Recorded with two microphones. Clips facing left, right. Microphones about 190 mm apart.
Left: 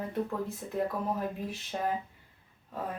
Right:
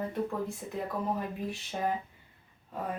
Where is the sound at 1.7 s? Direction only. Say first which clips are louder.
Even; centre (ahead or behind).